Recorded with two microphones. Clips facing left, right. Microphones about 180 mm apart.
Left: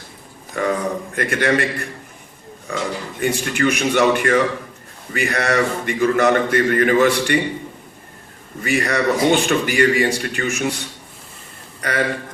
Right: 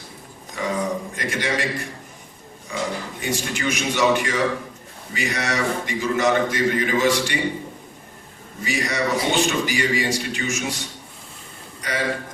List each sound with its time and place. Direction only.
0.5 s a man's voice: 60° left (ahead or behind)
8.6 s a man's voice: 60° left (ahead or behind)
11.8 s speech: 60° left (ahead or behind)